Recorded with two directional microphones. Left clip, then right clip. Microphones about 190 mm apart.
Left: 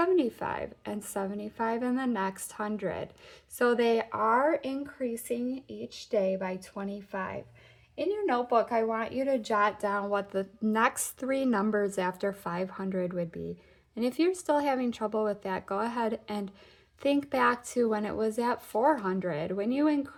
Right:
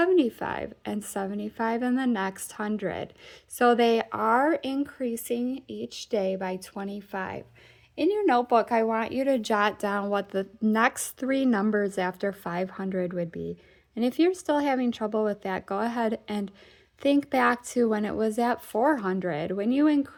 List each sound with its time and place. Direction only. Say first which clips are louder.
0.0 s a woman's voice: right 4 dB; 25° right (ahead or behind)